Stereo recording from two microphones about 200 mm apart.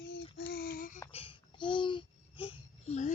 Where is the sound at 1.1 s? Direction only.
25° left (ahead or behind).